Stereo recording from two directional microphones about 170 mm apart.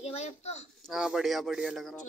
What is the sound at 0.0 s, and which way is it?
Speech, 40° left (ahead or behind).